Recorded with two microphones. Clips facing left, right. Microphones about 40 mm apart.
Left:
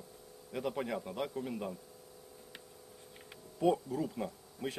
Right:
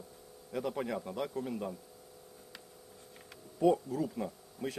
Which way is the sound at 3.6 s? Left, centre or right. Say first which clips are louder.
Right 2 dB; left.